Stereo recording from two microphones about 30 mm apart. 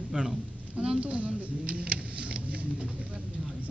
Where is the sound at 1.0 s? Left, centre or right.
Right.